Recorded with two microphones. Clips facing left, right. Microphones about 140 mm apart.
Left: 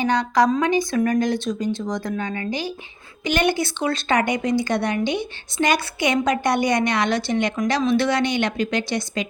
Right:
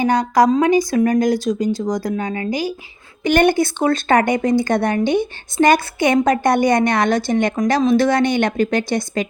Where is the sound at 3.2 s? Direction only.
55° right (ahead or behind).